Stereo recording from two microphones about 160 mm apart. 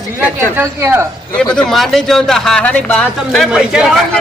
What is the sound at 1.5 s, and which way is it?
Speech, centre (ahead or behind).